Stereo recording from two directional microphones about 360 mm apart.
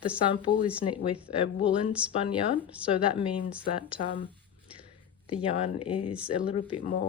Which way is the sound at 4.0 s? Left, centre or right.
Centre.